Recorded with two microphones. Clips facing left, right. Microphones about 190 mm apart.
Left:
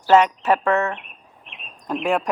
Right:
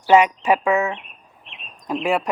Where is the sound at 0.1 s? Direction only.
10° right (ahead or behind).